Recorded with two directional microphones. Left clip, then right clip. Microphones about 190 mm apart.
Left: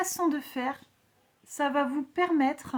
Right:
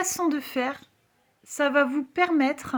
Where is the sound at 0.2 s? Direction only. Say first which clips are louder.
Right 3 dB; 20° right (ahead or behind).